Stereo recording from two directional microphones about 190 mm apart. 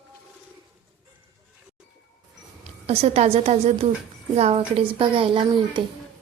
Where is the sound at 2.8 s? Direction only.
35° right (ahead or behind).